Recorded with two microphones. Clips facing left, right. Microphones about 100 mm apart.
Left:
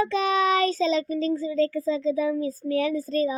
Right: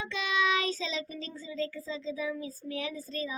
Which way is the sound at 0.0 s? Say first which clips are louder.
Left 9 dB; 40° left (ahead or behind).